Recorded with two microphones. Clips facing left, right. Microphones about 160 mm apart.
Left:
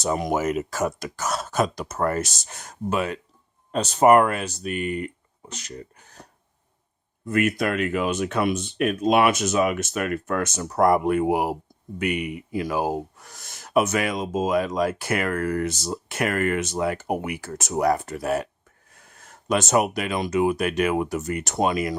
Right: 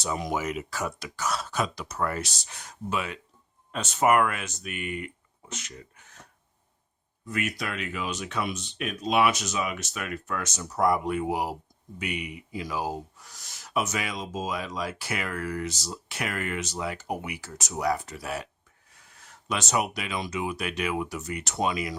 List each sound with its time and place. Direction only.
0.0 s speech: 50° left (ahead or behind)
7.3 s speech: 55° left (ahead or behind)